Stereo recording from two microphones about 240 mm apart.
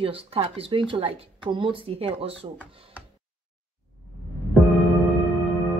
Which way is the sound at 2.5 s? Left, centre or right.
Centre.